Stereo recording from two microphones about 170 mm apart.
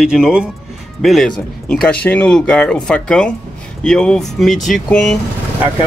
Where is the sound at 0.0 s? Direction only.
5° right (ahead or behind).